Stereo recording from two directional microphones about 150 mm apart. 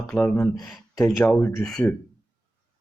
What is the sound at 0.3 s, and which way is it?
Speech, 20° left (ahead or behind).